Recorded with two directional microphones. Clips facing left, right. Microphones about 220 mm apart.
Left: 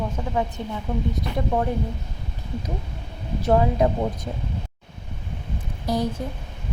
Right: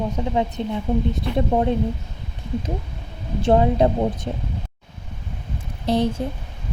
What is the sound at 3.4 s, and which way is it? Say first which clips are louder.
A woman's voice: right 3 dB; 30° right (ahead or behind).